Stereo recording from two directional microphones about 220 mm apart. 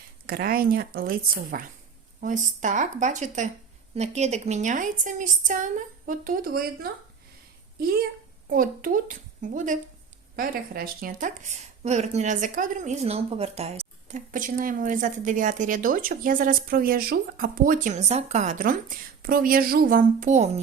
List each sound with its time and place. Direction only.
0.3 s a woman's voice: 40° right (ahead or behind)